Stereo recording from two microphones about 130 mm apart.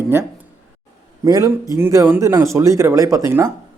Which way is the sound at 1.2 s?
25° right (ahead or behind).